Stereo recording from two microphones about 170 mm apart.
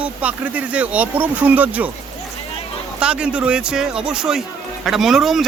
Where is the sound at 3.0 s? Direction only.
5° right (ahead or behind).